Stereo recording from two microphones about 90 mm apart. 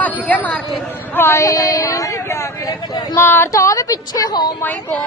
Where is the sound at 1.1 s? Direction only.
25° left (ahead or behind); by 3.1 s 45° left (ahead or behind).